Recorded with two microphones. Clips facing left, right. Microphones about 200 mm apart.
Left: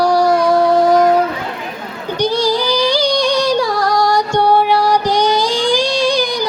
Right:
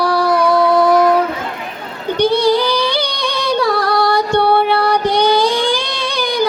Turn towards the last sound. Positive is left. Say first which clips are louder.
# left 2 dB
turn(degrees=-60)  # may be behind; listen again after turning